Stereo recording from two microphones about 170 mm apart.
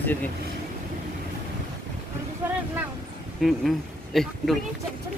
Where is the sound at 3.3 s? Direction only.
Centre (ahead or behind).